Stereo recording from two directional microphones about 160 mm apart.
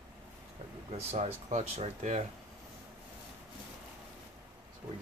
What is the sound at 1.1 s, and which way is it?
Speech, 45° right (ahead or behind).